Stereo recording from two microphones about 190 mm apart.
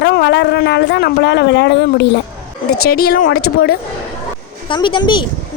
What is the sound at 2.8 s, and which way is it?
Speech, 50° left (ahead or behind).